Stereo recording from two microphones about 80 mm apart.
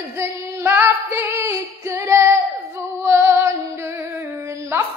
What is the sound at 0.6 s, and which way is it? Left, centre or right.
Female singing, right.